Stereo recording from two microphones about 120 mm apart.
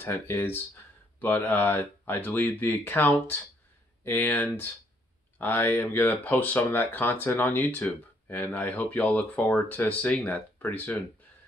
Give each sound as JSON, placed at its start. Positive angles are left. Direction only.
{"t": 0.0, "sound": "speech", "side_deg": 15}